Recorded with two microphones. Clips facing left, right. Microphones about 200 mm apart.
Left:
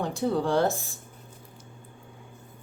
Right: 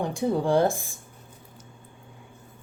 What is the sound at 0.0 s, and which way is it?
Speech, 15° right (ahead or behind).